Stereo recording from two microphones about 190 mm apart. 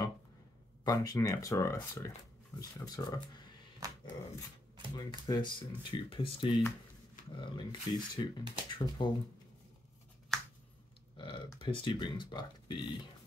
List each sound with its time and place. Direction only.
0.8 s speech: 20° left (ahead or behind)
3.8 s dog: 20° right (ahead or behind)
4.9 s speech: 20° left (ahead or behind)
10.3 s finger snapping: centre (ahead or behind)
11.1 s speech: 25° left (ahead or behind)